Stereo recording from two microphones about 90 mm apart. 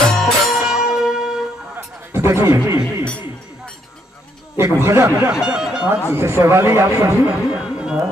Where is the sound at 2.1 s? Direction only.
30° right (ahead or behind).